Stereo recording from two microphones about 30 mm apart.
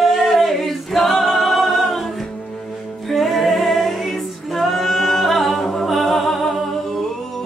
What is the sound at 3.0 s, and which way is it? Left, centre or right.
Music, centre.